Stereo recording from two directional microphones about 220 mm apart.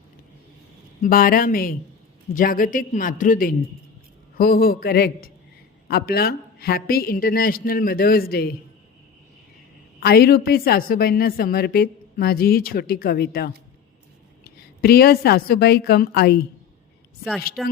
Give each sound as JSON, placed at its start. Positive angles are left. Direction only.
{"t": 1.0, "sound": "a woman's voice", "side_deg": 40}
{"t": 10.0, "sound": "a woman's voice", "side_deg": 45}
{"t": 17.6, "sound": "speech", "side_deg": 0}